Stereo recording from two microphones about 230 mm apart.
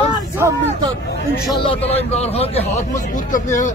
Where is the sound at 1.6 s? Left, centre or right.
Left.